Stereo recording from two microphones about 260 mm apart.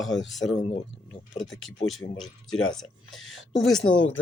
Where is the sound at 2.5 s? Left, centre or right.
Left.